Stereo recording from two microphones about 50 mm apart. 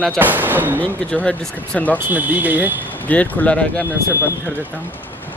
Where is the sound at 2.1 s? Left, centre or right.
Right.